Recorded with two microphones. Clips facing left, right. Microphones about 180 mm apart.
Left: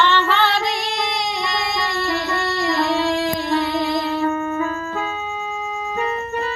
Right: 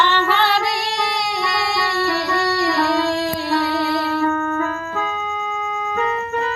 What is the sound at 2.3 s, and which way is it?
Music, 40° right (ahead or behind).